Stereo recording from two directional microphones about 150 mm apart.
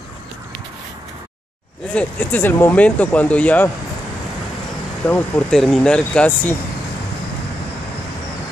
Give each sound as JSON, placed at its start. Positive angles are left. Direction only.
{"t": 2.0, "sound": "speech", "side_deg": 10}
{"t": 5.0, "sound": "speech", "side_deg": 10}